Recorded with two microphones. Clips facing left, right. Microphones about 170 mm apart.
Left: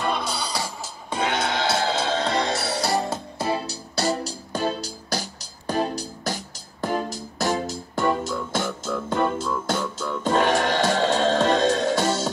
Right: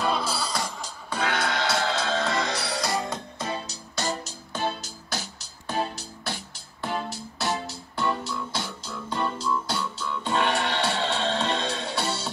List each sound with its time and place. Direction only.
0.0 s music: 5° right (ahead or behind)
0.7 s music: 5° left (ahead or behind)
1.1 s music: 25° left (ahead or behind); by 12.3 s 45° left (ahead or behind)